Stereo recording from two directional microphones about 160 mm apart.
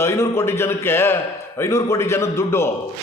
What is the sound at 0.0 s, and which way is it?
A man's voice, 15° left (ahead or behind).